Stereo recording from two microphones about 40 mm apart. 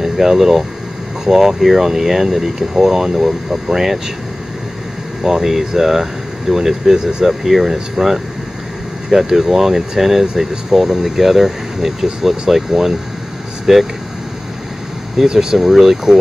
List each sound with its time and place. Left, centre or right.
0.0 s speech: centre
3.3 s speech: right
3.7 s speech: centre
5.2 s speech: centre
13.7 s speech: centre
15.1 s speech: centre